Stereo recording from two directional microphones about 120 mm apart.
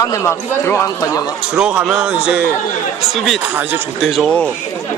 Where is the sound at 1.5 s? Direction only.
5° right (ahead or behind).